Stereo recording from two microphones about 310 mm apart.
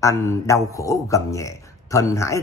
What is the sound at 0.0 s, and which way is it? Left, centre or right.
A man's voice, centre.